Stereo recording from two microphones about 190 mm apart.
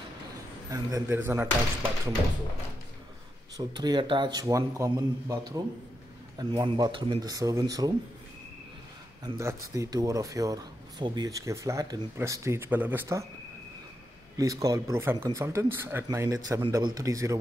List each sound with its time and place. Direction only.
0.7 s speech: 20° right (ahead or behind)
3.5 s speech: 20° right (ahead or behind)
9.2 s speech: 15° right (ahead or behind)
14.3 s speech: 20° right (ahead or behind)